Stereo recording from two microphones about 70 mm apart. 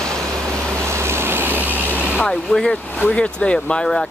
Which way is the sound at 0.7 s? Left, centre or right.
Right.